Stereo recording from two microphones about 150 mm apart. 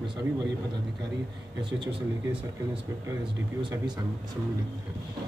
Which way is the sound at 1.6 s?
30° right (ahead or behind).